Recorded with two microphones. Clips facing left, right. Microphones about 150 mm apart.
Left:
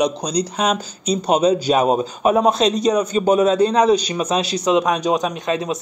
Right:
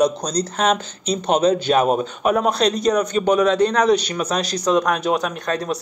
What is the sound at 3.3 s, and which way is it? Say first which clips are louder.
A man's voice: left 2 dB; 30° left (ahead or behind).